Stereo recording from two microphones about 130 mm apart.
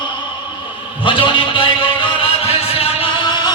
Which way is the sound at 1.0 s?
40° left (ahead or behind).